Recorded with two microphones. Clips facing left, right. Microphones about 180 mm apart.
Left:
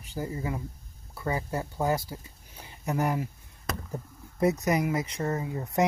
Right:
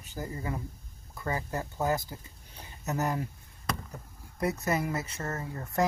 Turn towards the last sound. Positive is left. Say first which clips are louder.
# left 3 dB
turn(degrees=20)  # may be behind; listen again after turning